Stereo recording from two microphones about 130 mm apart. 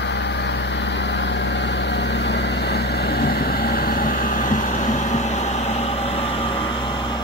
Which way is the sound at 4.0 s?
90° left.